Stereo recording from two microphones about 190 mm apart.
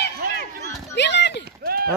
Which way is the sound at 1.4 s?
55° right (ahead or behind).